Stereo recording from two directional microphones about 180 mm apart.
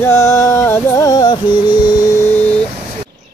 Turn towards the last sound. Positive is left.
turn(degrees=10)  # may be behind; listen again after turning